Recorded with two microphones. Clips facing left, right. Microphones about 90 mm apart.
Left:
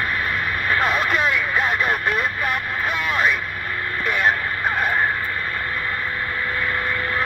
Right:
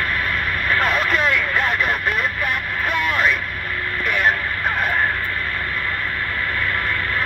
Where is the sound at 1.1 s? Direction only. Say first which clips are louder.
Right 1 dB; 15° left (ahead or behind).